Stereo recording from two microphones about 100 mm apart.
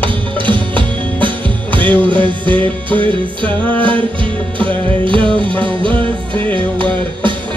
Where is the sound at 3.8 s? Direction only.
60° right (ahead or behind).